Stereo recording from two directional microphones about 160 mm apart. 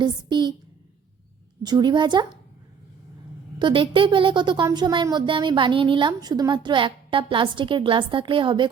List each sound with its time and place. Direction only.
0.0 s a woman's voice: 30° right (ahead or behind)
1.6 s a woman's voice: 25° right (ahead or behind)
3.6 s a woman's voice: 30° right (ahead or behind)